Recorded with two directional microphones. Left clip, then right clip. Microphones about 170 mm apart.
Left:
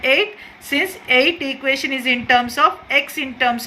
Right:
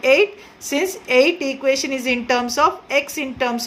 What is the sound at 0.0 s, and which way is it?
A woman's voice, 35° right (ahead or behind).